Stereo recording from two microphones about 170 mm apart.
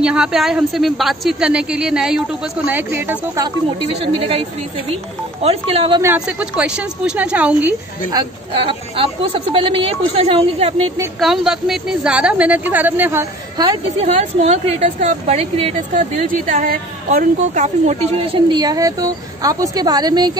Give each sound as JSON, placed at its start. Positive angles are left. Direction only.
{"t": 0.0, "sound": "a woman's voice", "side_deg": -5}
{"t": 4.0, "sound": "speech", "side_deg": -35}
{"t": 6.1, "sound": "a woman's voice", "side_deg": -5}
{"t": 8.1, "sound": "speech", "side_deg": -25}
{"t": 11.1, "sound": "a woman's voice", "side_deg": 0}
{"t": 14.0, "sound": "speech", "side_deg": -40}
{"t": 16.2, "sound": "a woman's voice", "side_deg": -50}